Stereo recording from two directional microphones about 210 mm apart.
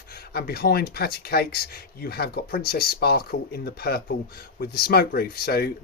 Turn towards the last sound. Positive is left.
turn(degrees=50)  # may be behind; listen again after turning